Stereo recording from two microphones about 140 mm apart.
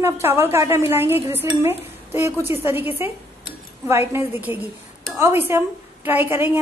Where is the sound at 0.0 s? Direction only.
20° right (ahead or behind).